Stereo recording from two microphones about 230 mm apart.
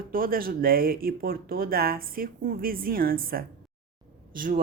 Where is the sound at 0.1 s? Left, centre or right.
Right.